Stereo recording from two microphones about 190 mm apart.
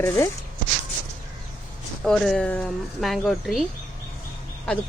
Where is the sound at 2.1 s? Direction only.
5° left (ahead or behind).